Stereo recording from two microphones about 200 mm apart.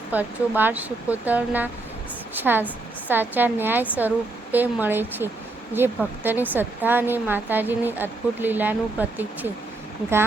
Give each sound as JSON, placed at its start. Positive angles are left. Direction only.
{"t": 0.1, "sound": "a woman's voice", "side_deg": -10}